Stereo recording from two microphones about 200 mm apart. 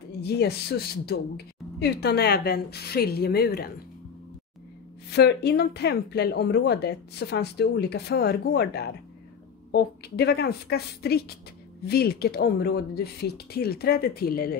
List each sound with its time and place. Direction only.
0.2 s a woman's voice: 55° left (ahead or behind)
5.1 s a woman's voice: 55° left (ahead or behind)